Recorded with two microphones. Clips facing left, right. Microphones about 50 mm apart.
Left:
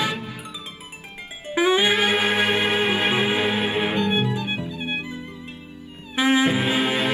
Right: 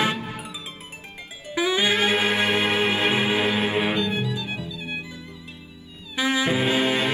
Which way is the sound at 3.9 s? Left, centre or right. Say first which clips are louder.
Left 3 dB; left.